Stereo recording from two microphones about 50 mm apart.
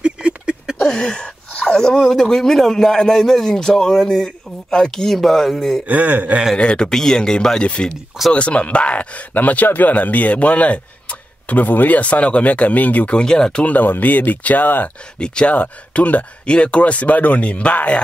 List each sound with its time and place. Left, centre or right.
0.7 s speech: centre
5.9 s speech: right
6.5 s speech: centre
7.6 s speech: left
13.1 s speech: centre
13.7 s speech: left
15.1 s speech: centre
15.5 s speech: left